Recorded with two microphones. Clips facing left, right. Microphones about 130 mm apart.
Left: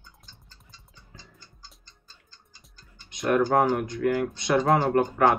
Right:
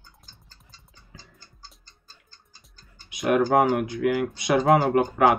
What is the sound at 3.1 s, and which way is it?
Speech, 5° right (ahead or behind).